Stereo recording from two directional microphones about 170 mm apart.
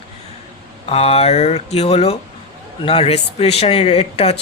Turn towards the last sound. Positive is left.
turn(degrees=40)  # may be behind; listen again after turning